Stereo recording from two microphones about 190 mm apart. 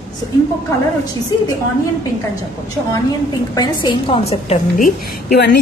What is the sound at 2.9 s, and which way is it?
A woman's voice, 20° left (ahead or behind).